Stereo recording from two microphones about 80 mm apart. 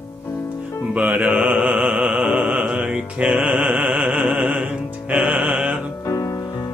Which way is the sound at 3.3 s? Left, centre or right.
Centre.